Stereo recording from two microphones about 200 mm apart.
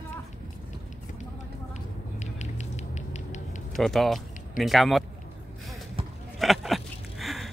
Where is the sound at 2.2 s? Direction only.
35° left (ahead or behind).